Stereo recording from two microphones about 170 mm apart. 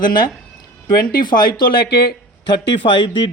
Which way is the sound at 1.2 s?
25° left (ahead or behind).